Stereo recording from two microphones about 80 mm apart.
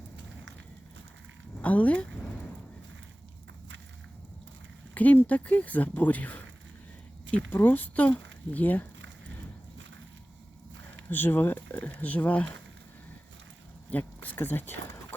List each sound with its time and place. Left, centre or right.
1.6 s speech: centre
4.9 s speech: centre
7.5 s speech: left
11.1 s speech: left
13.9 s speech: left